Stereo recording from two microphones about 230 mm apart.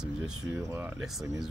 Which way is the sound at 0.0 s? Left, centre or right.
Centre.